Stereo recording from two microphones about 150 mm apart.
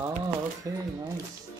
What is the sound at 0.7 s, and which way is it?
Speech, 20° right (ahead or behind).